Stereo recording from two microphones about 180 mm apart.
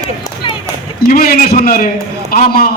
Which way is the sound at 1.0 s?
55° left (ahead or behind).